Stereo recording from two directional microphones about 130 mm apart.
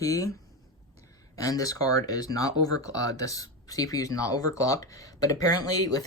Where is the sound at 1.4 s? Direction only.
25° left (ahead or behind).